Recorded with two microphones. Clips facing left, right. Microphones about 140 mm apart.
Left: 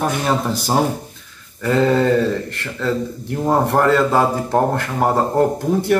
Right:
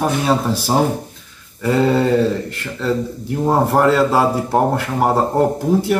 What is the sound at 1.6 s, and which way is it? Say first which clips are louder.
Speech: even; 5° right (ahead or behind).